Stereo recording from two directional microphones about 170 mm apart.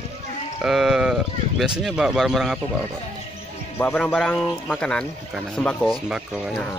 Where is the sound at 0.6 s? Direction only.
5° right (ahead or behind).